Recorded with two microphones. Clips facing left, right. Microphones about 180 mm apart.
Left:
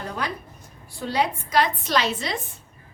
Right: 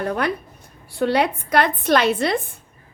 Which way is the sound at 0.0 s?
60° right (ahead or behind).